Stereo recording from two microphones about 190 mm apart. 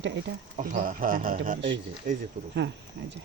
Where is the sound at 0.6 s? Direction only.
45° right (ahead or behind).